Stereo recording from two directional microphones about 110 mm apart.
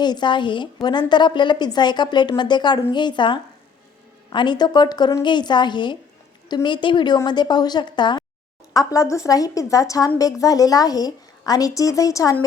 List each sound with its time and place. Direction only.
0.0 s a woman's voice: 40° left (ahead or behind)
8.7 s a woman's voice: 30° left (ahead or behind)